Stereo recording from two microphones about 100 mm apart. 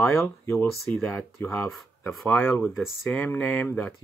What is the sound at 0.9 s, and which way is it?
Speech, 15° left (ahead or behind).